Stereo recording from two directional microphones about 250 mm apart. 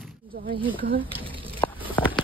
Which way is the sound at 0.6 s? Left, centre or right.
Right.